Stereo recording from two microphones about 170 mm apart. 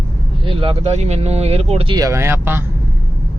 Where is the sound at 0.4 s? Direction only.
30° right (ahead or behind).